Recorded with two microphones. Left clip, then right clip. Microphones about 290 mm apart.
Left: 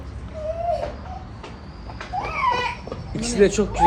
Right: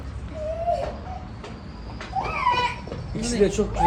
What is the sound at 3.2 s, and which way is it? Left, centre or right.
Speech, left.